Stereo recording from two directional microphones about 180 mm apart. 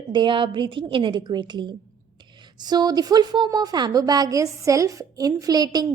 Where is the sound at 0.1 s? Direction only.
25° right (ahead or behind).